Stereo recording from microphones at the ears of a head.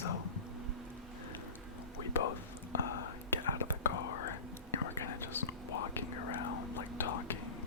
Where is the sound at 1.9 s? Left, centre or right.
Left.